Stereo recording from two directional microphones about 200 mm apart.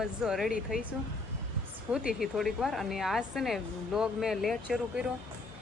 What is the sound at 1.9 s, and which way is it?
Speech, centre (ahead or behind).